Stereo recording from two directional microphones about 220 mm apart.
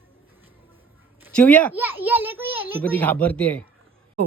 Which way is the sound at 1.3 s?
5° left (ahead or behind).